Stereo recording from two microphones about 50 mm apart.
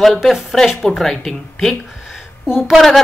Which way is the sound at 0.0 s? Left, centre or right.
Centre.